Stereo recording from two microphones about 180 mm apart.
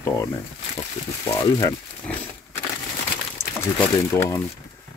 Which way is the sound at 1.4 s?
20° left (ahead or behind).